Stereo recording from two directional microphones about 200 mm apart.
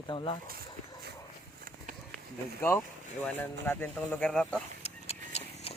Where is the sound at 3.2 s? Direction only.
10° left (ahead or behind).